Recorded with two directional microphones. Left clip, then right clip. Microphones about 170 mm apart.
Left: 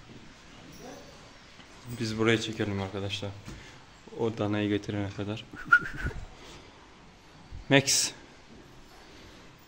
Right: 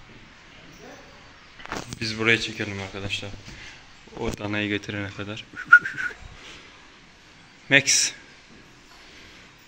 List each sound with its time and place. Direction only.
2.0 s speech: 20° left (ahead or behind)
5.2 s speech: 30° left (ahead or behind)
7.6 s a man's voice: 35° left (ahead or behind)